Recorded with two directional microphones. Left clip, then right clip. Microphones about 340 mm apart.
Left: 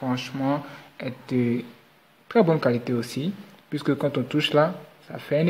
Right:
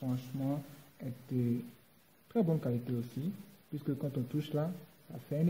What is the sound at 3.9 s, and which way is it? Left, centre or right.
Speech, centre.